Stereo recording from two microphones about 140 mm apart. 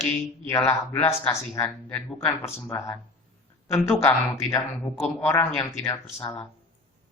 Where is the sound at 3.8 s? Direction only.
20° left (ahead or behind).